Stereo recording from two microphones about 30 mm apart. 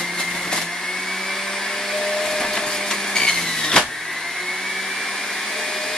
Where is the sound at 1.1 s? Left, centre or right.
Centre.